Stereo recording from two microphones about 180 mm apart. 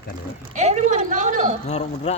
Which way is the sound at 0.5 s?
40° right (ahead or behind).